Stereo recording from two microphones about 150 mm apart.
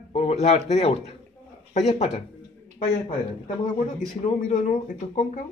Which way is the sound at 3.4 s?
55° left (ahead or behind).